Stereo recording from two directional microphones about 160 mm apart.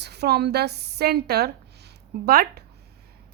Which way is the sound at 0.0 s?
90° right.